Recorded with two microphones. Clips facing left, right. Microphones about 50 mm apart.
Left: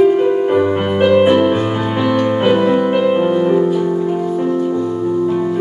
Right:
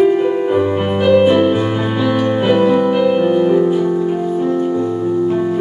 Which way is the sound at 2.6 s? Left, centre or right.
Centre.